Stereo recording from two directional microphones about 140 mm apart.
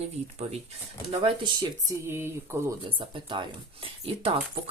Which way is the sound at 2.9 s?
35° right (ahead or behind).